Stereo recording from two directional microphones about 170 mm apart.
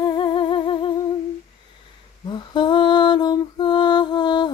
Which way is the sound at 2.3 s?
25° left (ahead or behind).